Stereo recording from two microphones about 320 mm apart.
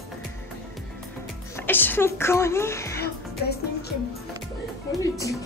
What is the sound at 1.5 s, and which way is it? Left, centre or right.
A woman's voice, centre.